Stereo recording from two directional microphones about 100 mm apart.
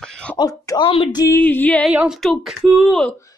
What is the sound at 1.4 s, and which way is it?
Music, 15° left (ahead or behind).